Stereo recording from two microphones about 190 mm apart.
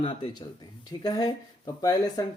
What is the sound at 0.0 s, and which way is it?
Speech, 25° left (ahead or behind).